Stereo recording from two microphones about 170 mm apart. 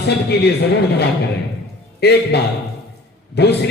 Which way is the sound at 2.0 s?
75° left (ahead or behind).